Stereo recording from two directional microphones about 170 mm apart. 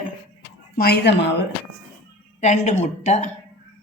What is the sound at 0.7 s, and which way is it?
Speech, 65° left (ahead or behind).